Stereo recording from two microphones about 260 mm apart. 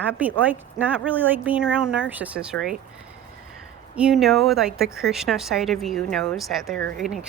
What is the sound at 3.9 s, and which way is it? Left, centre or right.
Speech, centre.